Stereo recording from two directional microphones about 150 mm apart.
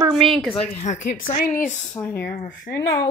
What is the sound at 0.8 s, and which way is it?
Speech, 50° left (ahead or behind).